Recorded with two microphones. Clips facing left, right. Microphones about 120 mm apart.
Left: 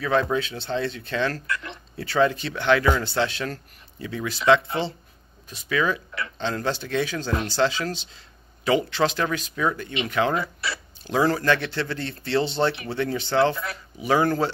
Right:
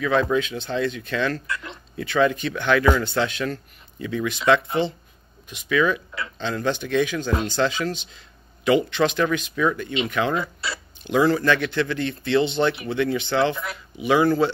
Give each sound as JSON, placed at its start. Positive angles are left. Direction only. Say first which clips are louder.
{"t": 0.0, "sound": "speech", "louder": "right 2 dB", "side_deg": 30}
{"t": 1.5, "sound": "speech", "louder": "left 1 dB", "side_deg": -20}
{"t": 2.0, "sound": "speech", "louder": "right 1 dB", "side_deg": 30}
{"t": 10.3, "sound": "speech", "louder": "right 1 dB", "side_deg": -25}
{"t": 11.1, "sound": "speech", "louder": "right 2 dB", "side_deg": 35}
{"t": 13.6, "sound": "speech", "louder": "right 1 dB", "side_deg": -15}
{"t": 14.0, "sound": "speech", "louder": "right 3 dB", "side_deg": 40}